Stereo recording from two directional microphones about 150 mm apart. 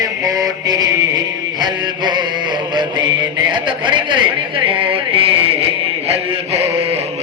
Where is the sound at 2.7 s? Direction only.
30° right (ahead or behind).